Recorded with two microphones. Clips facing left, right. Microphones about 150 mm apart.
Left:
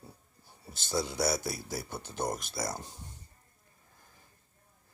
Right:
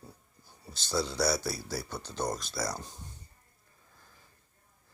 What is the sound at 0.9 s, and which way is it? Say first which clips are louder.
Speech: right 1 dB; 20° left (ahead or behind).